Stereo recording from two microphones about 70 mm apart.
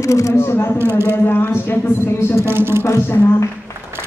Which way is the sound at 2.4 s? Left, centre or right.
Right.